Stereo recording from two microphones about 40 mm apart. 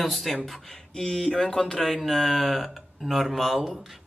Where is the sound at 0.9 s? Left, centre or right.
Centre.